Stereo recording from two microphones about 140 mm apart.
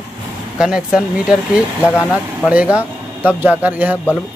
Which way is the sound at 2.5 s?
10° right (ahead or behind).